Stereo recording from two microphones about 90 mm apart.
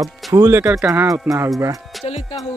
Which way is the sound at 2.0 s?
90° left.